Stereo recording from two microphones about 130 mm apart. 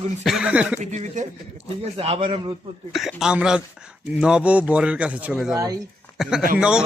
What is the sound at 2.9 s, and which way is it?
Speech, centre (ahead or behind).